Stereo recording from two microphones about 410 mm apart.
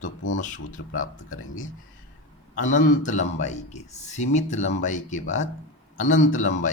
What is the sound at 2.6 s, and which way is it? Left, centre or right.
Speech, centre.